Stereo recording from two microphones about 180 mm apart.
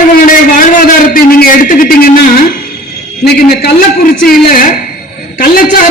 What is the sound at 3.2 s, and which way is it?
A man's voice, 60° left (ahead or behind).